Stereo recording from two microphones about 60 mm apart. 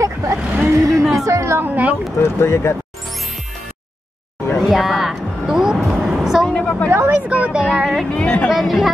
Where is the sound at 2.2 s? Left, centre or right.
Left.